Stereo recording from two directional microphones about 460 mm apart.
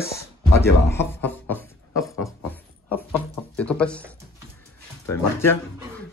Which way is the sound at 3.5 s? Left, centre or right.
Centre.